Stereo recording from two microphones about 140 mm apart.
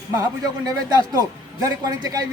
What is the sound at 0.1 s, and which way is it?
A man's voice, 25° right (ahead or behind).